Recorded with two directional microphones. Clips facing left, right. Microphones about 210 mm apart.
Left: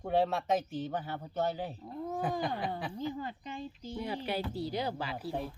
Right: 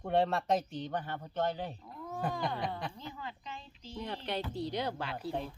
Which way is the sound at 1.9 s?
40° left (ahead or behind).